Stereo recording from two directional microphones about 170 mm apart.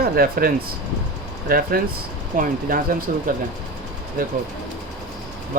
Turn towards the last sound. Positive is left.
turn(degrees=-55)  # may be behind; listen again after turning